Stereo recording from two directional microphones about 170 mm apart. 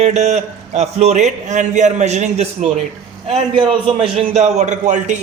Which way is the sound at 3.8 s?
30° right (ahead or behind).